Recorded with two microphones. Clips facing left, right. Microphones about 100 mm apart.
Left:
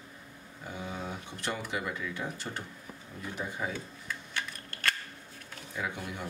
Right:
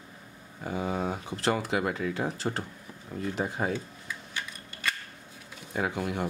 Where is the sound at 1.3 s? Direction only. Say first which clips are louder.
Right 9 dB; 90° right.